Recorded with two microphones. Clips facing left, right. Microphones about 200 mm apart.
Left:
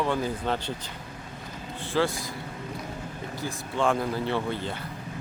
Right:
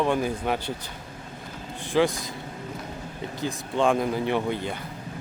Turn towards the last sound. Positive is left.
turn(degrees=-15)  # may be behind; listen again after turning